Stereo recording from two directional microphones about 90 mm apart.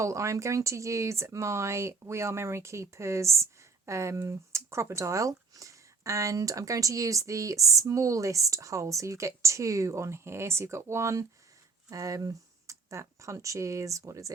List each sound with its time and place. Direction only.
0.0 s speech: 35° right (ahead or behind)